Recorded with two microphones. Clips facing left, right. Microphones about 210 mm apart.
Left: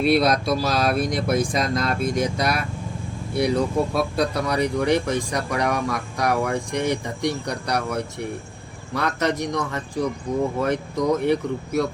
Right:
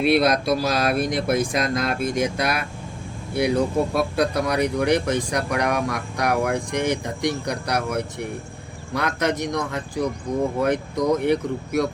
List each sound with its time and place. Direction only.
0.0 s speech: centre (ahead or behind)
10.3 s speech: 40° right (ahead or behind)
10.6 s speech: centre (ahead or behind)